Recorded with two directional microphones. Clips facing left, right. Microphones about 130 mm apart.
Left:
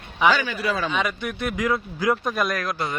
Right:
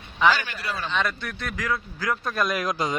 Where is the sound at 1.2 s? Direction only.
20° left (ahead or behind).